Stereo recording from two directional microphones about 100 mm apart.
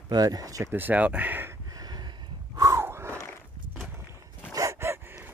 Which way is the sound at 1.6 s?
40° right (ahead or behind).